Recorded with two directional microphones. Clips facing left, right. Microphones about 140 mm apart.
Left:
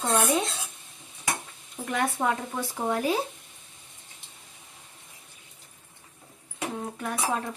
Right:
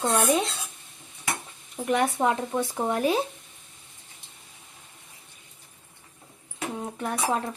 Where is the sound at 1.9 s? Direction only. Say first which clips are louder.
Right 3 dB; 25° right (ahead or behind).